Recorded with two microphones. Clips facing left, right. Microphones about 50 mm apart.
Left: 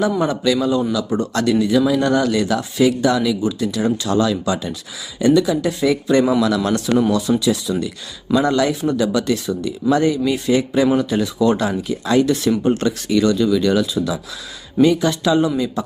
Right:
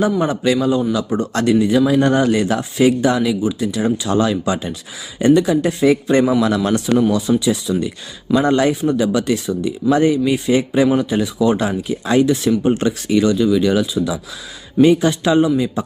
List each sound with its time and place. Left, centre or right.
0.2 s speech: right
4.1 s speech: right
14.8 s speech: right